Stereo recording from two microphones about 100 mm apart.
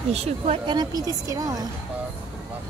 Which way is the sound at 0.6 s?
45° right (ahead or behind).